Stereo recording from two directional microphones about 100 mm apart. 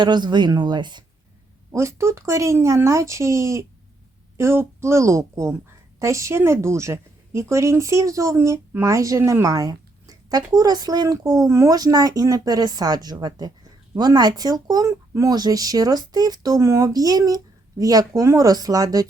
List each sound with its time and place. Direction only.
0.0 s speech: 50° right (ahead or behind)
1.7 s speech: 30° right (ahead or behind)